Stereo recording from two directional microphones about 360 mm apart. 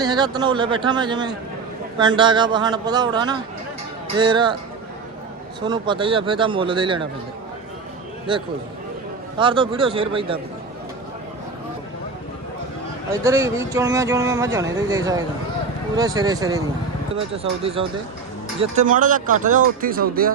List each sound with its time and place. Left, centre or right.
0.0 s speech: centre
5.6 s speech: centre
9.4 s speech: centre
13.2 s speech: centre; by 20.3 s right